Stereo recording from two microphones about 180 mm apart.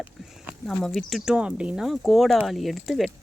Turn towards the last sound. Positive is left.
turn(degrees=0)  # may be behind; listen again after turning